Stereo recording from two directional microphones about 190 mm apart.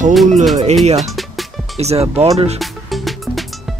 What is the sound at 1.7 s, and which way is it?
Speech, 35° right (ahead or behind).